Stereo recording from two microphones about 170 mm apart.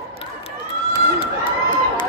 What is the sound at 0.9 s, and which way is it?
Run, 30° left (ahead or behind).